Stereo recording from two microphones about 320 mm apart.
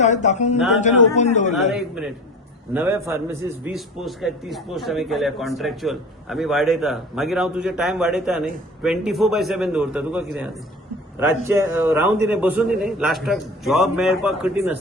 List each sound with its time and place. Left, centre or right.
0.0 s a man's voice: left
2.7 s a man's voice: centre